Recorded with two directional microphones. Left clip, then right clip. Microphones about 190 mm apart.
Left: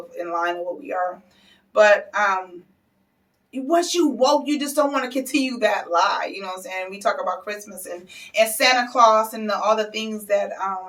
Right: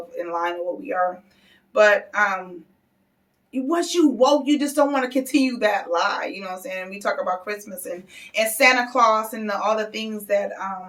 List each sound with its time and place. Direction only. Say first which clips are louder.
0.2 s speech: left 1 dB; 15° right (ahead or behind)
3.5 s speech: left 2 dB; 15° right (ahead or behind)